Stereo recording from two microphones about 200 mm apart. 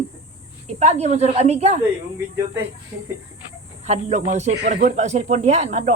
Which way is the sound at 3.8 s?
35° right (ahead or behind).